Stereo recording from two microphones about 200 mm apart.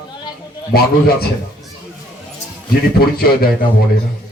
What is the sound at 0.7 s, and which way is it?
Speech, 50° left (ahead or behind).